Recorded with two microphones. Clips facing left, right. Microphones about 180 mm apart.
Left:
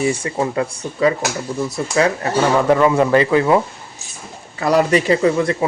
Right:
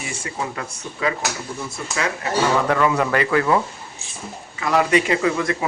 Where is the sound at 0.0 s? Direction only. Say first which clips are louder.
Left 10 dB; 30° left (ahead or behind).